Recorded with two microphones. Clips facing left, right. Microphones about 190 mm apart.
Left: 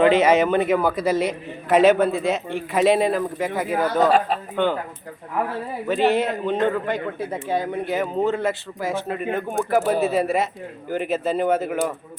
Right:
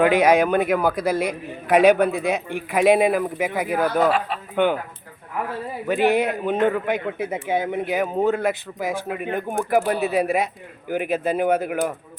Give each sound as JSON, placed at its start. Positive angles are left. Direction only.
{"t": 0.0, "sound": "a man's voice", "side_deg": -10}
{"t": 5.9, "sound": "a man's voice", "side_deg": -15}